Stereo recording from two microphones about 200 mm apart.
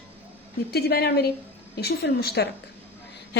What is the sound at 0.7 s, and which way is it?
A woman's voice, 55° left (ahead or behind).